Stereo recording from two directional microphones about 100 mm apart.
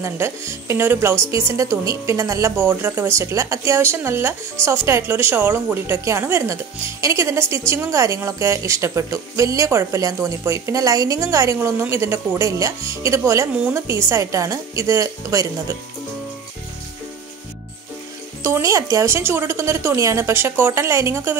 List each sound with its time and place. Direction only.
0.0 s a woman's voice: 25° right (ahead or behind)
2.5 s a woman's voice: 20° right (ahead or behind)
18.4 s a woman's voice: 30° right (ahead or behind)